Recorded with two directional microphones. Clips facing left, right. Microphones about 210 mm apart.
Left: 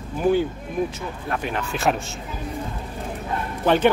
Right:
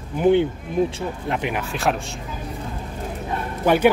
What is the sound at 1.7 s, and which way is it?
Speech, centre (ahead or behind).